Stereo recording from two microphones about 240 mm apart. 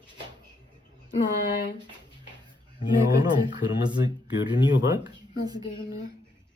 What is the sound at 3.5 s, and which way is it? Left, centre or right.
Speech, centre.